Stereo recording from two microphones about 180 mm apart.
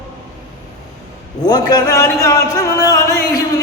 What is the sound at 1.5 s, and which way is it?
A man's voice, 20° left (ahead or behind).